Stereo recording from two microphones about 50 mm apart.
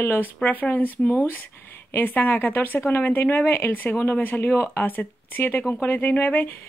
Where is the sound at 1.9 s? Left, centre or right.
Left.